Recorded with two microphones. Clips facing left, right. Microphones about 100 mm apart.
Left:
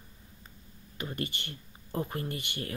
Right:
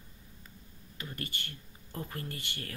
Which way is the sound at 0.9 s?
20° left (ahead or behind).